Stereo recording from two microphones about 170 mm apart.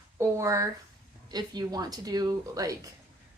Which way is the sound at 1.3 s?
25° right (ahead or behind).